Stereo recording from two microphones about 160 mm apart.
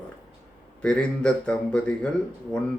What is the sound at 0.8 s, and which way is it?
Speech, 5° left (ahead or behind).